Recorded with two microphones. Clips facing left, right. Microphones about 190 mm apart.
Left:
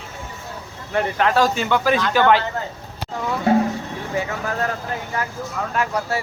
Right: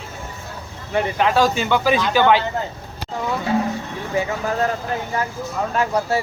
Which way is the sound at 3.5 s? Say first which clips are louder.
Left 5 dB; 55° left (ahead or behind).